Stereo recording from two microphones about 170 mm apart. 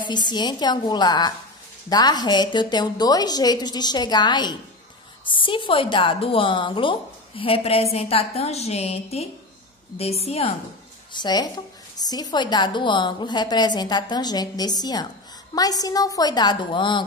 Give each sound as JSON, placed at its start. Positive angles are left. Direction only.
{"t": 0.0, "sound": "a woman's voice", "side_deg": 25}
{"t": 11.1, "sound": "a woman's voice", "side_deg": 25}